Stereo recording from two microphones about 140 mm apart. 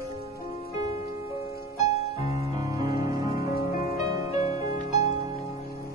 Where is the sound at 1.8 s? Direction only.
25° right (ahead or behind).